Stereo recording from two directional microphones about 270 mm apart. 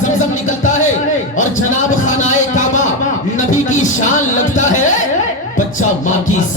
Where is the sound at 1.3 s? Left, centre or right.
Left.